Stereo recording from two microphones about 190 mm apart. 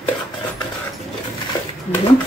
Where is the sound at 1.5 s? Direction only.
20° left (ahead or behind).